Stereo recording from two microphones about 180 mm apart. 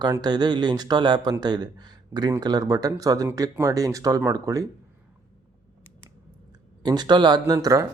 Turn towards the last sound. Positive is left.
turn(degrees=-20)  # may be behind; listen again after turning